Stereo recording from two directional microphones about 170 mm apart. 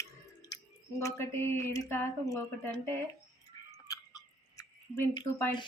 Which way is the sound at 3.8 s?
20° left (ahead or behind).